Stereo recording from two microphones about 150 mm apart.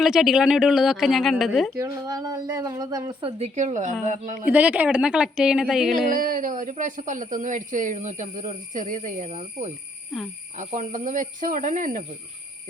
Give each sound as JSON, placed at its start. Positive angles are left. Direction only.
{"t": 0.0, "sound": "speech", "side_deg": 0}
{"t": 1.8, "sound": "a woman's voice", "side_deg": -25}
{"t": 4.4, "sound": "a woman's voice", "side_deg": -10}
{"t": 6.1, "sound": "speech", "side_deg": -65}